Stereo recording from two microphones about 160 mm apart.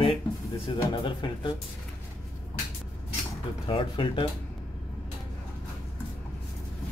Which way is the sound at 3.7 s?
30° left (ahead or behind).